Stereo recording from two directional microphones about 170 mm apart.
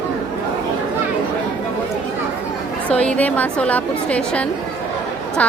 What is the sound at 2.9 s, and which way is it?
A woman's voice, 5° left (ahead or behind).